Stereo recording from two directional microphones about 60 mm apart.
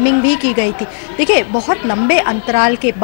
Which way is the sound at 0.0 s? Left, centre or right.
Centre.